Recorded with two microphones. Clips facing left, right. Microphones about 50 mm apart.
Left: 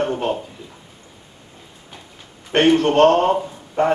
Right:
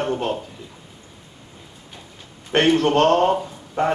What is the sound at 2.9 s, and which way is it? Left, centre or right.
Speech, left.